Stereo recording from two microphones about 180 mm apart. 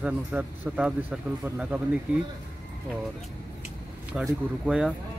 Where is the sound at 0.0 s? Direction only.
5° right (ahead or behind).